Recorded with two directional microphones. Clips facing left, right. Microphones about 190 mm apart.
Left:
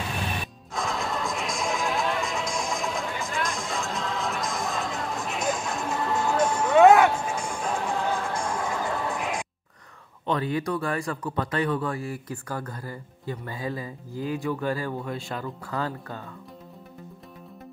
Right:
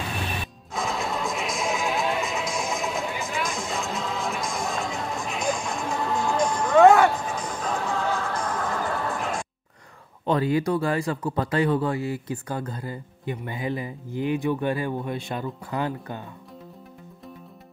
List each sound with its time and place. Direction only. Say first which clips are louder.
0.7 s music: right 1 dB; centre (ahead or behind); by 9.5 s 15° left (ahead or behind)
10.2 s speech: right 4 dB; 30° right (ahead or behind)